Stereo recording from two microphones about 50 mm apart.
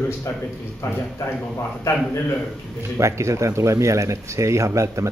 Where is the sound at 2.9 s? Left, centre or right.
Right.